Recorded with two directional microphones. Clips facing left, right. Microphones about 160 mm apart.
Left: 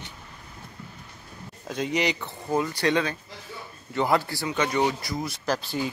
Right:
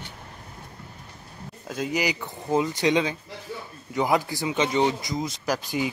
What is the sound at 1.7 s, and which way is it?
Speech, 5° right (ahead or behind).